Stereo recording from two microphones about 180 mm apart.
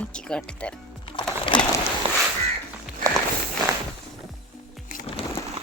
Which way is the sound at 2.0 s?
30° right (ahead or behind).